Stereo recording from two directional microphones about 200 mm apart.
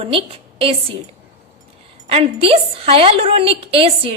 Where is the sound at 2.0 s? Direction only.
30° right (ahead or behind).